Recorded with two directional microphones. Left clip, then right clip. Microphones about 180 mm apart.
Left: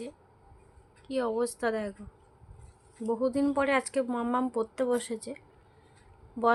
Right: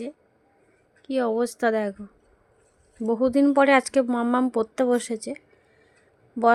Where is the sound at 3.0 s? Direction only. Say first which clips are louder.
Right 7 dB; 45° right (ahead or behind).